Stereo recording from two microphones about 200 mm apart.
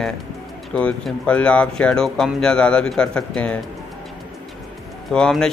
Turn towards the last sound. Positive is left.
turn(degrees=5)  # may be behind; listen again after turning